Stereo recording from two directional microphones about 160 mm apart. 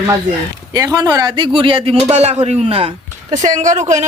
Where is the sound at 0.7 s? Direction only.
25° right (ahead or behind).